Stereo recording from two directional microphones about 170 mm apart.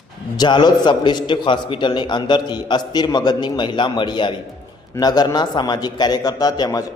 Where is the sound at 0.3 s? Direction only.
25° left (ahead or behind).